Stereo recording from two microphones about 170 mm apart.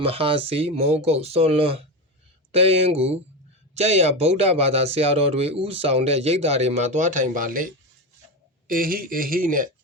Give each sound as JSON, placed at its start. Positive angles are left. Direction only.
{"t": 0.0, "sound": "speech", "side_deg": -35}